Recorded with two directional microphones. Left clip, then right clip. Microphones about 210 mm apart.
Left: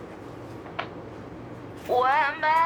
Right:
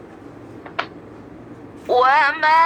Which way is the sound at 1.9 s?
25° right (ahead or behind).